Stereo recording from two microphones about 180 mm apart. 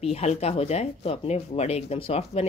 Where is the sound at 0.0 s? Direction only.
35° left (ahead or behind).